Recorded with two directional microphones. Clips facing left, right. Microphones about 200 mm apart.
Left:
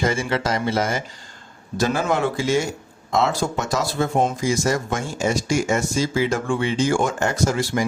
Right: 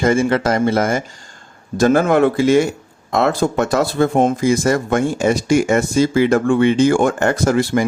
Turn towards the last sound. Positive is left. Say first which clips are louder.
# right 6 dB
turn(degrees=-55)  # may be behind; listen again after turning